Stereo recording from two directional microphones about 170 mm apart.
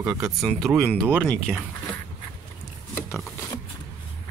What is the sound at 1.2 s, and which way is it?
Speech, 5° left (ahead or behind).